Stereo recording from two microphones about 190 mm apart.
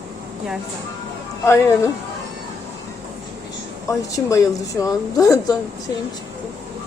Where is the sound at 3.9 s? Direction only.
15° left (ahead or behind).